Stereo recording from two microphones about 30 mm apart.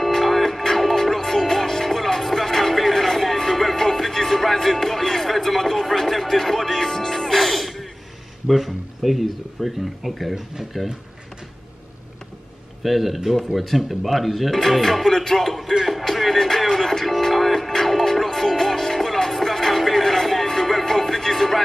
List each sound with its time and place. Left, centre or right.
0.4 s music: centre
8.5 s speech: centre
12.8 s speech: centre
14.5 s music: centre
17.0 s music: centre